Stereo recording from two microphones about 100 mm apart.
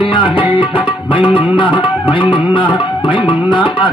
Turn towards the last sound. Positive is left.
turn(degrees=55)  # may be behind; listen again after turning